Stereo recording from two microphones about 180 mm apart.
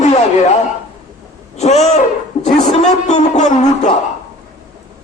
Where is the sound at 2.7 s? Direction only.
40° left (ahead or behind).